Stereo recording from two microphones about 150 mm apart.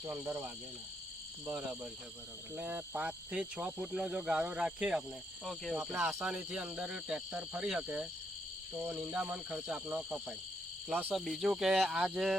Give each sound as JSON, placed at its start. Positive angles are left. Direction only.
{"t": 0.0, "sound": "speech", "side_deg": -15}
{"t": 1.5, "sound": "speech", "side_deg": -10}
{"t": 5.7, "sound": "speech", "side_deg": -15}
{"t": 6.2, "sound": "speech", "side_deg": -5}
{"t": 10.8, "sound": "cricket", "side_deg": -10}
{"t": 11.1, "sound": "speech", "side_deg": 0}